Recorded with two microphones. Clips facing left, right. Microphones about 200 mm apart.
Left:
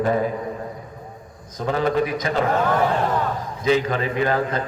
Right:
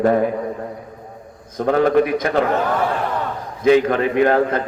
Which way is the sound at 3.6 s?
55° right (ahead or behind).